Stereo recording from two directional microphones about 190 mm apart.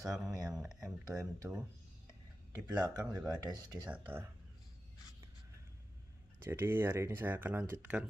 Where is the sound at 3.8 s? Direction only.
10° right (ahead or behind).